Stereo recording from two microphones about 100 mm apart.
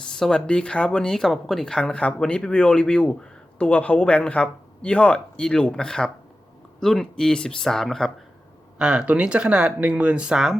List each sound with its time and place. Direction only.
0.1 s speech: 5° left (ahead or behind)
8.8 s speech: 10° right (ahead or behind)